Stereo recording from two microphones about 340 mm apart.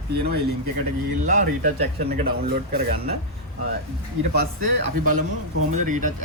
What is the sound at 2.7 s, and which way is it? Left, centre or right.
Speech, right.